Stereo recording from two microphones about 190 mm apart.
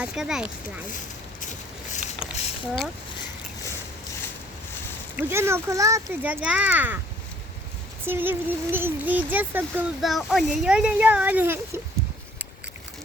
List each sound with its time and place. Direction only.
0.0 s speech: 5° right (ahead or behind)
0.9 s a sound: 40° left (ahead or behind)
5.1 s speech: 15° right (ahead or behind)
8.0 s speech: 10° right (ahead or behind)